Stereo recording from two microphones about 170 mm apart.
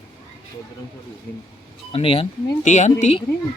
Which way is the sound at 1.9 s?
35° left (ahead or behind).